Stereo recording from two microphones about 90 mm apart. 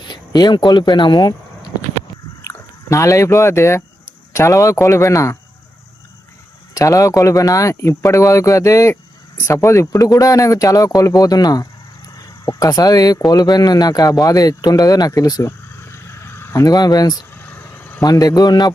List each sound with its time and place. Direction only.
0.0 s speech: 55° left (ahead or behind)
2.4 s speech: 30° left (ahead or behind)
6.7 s speech: 35° left (ahead or behind)
15.4 s vehicle: 30° left (ahead or behind)
16.6 s speech: 45° left (ahead or behind)